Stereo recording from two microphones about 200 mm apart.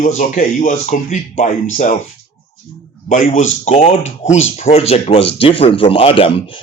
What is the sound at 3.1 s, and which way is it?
A man's voice, 40° left (ahead or behind).